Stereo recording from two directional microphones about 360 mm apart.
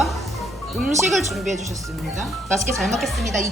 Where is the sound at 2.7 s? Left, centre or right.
Centre.